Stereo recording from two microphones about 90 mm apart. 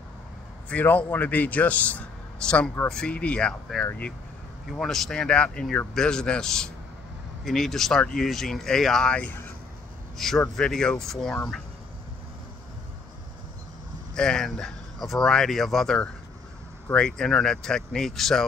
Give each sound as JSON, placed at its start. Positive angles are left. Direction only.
{"t": 0.7, "sound": "a man's voice", "side_deg": 15}
{"t": 3.8, "sound": "speech", "side_deg": 25}
{"t": 4.7, "sound": "a man's voice", "side_deg": 5}
{"t": 14.1, "sound": "a man's voice", "side_deg": 5}